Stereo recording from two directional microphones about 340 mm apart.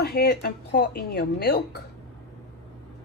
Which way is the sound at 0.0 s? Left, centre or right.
Left.